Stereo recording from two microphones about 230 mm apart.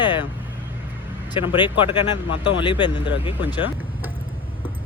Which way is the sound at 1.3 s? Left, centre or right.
Centre.